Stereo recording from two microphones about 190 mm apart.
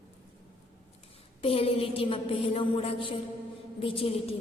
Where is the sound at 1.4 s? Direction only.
30° left (ahead or behind).